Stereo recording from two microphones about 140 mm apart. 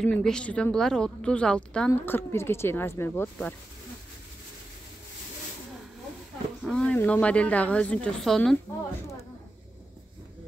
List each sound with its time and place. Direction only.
0.0 s speech: 5° left (ahead or behind)
1.9 s speech: 15° left (ahead or behind)
6.6 s a sound: 5° left (ahead or behind)
7.0 s speech: 10° left (ahead or behind)